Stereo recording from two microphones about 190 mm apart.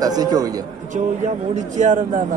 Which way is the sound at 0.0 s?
20° right (ahead or behind).